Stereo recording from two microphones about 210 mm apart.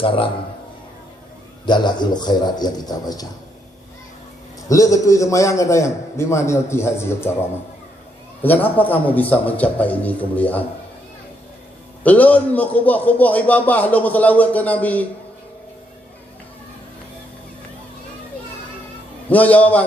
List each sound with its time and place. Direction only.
1.6 s a man's voice: 20° left (ahead or behind)
4.7 s a man's voice: 15° left (ahead or behind)
8.4 s a man's voice: 10° left (ahead or behind)
12.0 s a man's voice: 5° left (ahead or behind)
19.3 s a man's voice: 5° left (ahead or behind)